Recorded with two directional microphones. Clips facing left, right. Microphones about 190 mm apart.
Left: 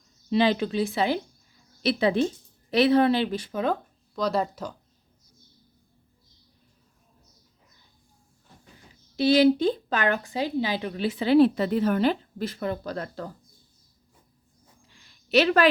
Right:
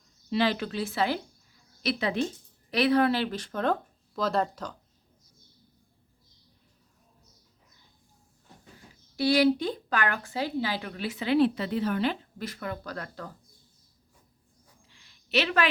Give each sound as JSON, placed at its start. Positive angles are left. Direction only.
{"t": 0.3, "sound": "a woman's voice", "side_deg": 20}
{"t": 1.8, "sound": "a woman's voice", "side_deg": 30}
{"t": 9.1, "sound": "a woman's voice", "side_deg": 25}
{"t": 12.4, "sound": "a woman's voice", "side_deg": 30}
{"t": 14.8, "sound": "a sound", "side_deg": 45}